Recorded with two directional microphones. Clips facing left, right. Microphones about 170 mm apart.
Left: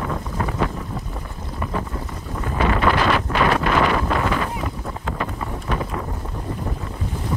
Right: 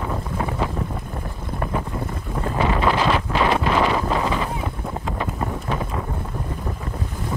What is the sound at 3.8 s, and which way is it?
Wind noise, 15° right (ahead or behind).